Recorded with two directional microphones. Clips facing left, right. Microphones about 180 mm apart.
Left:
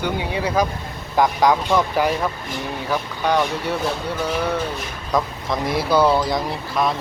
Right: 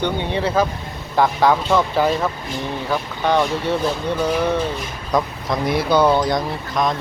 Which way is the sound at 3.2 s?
10° left (ahead or behind).